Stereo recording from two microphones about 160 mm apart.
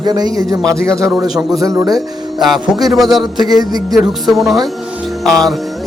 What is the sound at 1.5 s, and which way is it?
Speech, 20° right (ahead or behind).